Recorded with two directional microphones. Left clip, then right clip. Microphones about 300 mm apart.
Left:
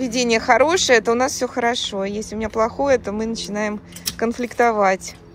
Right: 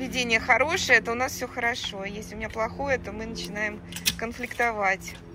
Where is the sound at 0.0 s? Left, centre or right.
Centre.